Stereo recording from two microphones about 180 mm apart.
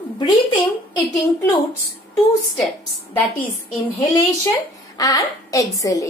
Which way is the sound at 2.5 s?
Centre (ahead or behind).